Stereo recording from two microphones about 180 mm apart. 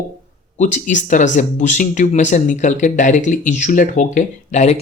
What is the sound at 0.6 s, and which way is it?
Speech, 45° left (ahead or behind).